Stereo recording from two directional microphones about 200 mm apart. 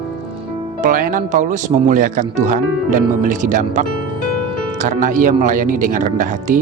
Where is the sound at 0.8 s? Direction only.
45° right (ahead or behind).